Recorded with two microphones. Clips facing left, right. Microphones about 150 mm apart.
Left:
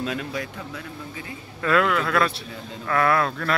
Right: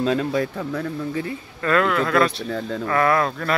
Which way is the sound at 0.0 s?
35° right (ahead or behind).